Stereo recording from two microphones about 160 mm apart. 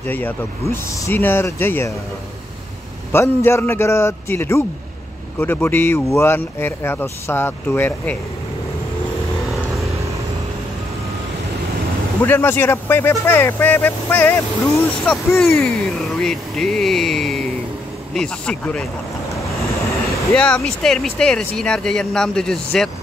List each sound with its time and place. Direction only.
0.0 s speech: 10° left (ahead or behind)
3.1 s speech: 15° left (ahead or behind)
12.2 s speech: 15° left (ahead or behind)
20.3 s speech: 5° left (ahead or behind)